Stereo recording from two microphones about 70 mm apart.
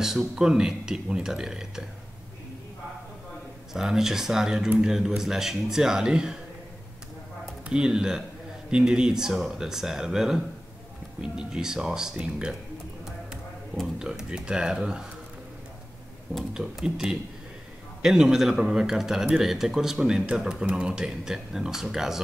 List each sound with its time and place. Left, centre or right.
0.0 s speech: centre
3.7 s speech: centre
7.6 s speech: centre
13.9 s speech: centre
16.5 s speech: centre